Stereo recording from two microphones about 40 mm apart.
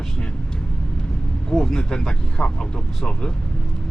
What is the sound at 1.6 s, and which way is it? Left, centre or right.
Speech, centre.